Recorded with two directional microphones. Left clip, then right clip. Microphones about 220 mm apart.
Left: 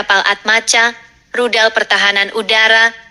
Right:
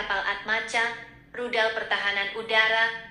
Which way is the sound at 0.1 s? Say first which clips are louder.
Left 17 dB; 45° left (ahead or behind).